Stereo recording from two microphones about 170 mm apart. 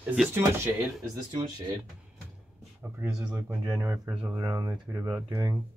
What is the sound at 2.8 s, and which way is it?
Speech, 10° right (ahead or behind).